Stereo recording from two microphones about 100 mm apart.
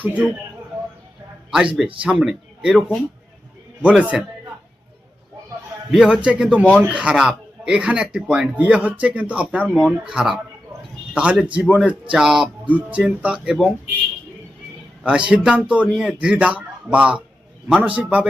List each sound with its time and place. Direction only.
0.0 s speech: 15° right (ahead or behind)
1.5 s a man's voice: 5° right (ahead or behind)
5.9 s a man's voice: 5° right (ahead or behind)
15.0 s speech: 10° right (ahead or behind)